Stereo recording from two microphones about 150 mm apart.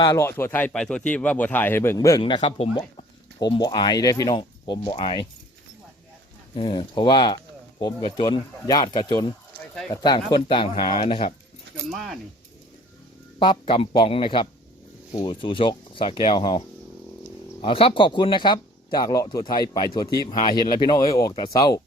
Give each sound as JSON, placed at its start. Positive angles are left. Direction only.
{"t": 0.1, "sound": "speech", "side_deg": 15}
{"t": 2.4, "sound": "speech", "side_deg": 40}
{"t": 3.4, "sound": "speech", "side_deg": 25}
{"t": 6.5, "sound": "speech", "side_deg": 30}
{"t": 11.9, "sound": "speech", "side_deg": 0}
{"t": 13.4, "sound": "speech", "side_deg": 35}